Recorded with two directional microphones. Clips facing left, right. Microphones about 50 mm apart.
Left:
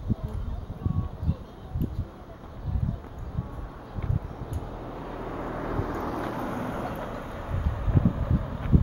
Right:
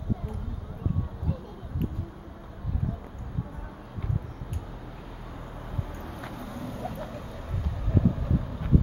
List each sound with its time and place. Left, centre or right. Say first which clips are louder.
5.0 s vehicle: left 8 dB; left
5.4 s vehicle: left 9 dB; left
6.2 s vehicle: left 7 dB; left; by 8.7 s centre